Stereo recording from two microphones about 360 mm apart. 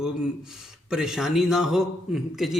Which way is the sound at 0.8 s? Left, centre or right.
Centre.